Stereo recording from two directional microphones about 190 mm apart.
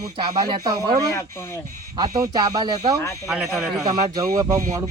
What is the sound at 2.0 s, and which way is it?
Speech, 20° right (ahead or behind).